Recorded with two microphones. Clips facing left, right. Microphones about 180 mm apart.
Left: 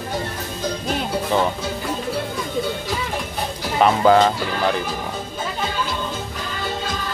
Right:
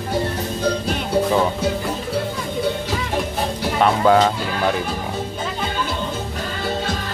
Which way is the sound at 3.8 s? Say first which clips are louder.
Left 1 dB; centre (ahead or behind).